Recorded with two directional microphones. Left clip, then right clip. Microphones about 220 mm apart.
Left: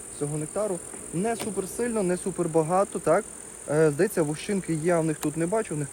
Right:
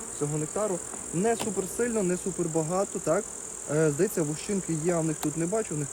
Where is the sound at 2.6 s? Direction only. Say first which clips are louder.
Left 6 dB; 20° left (ahead or behind).